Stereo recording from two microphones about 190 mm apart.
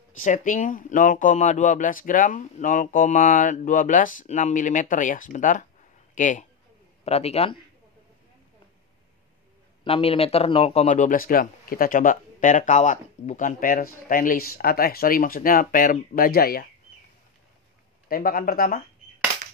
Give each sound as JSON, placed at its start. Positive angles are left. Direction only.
{"t": 0.2, "sound": "a man's voice", "side_deg": 45}
{"t": 9.8, "sound": "speech", "side_deg": 30}
{"t": 18.0, "sound": "speech", "side_deg": 50}